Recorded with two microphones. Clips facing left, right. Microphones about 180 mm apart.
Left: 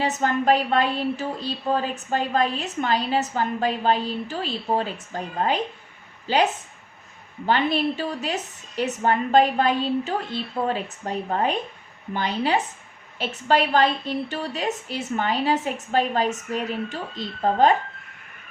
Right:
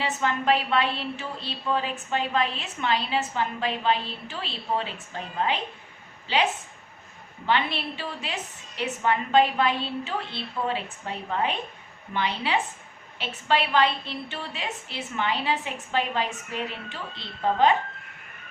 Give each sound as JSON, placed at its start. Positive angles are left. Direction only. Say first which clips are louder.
{"t": 0.0, "sound": "a woman's voice", "louder": "left 4 dB", "side_deg": 40}